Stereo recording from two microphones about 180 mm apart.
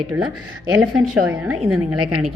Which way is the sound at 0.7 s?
5° right (ahead or behind).